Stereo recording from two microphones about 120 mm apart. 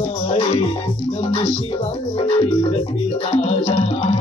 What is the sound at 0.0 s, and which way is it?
Music, 50° left (ahead or behind).